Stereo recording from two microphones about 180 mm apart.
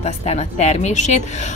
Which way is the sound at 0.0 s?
35° left (ahead or behind).